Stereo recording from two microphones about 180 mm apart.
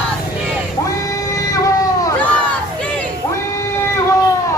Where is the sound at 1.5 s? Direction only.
20° left (ahead or behind).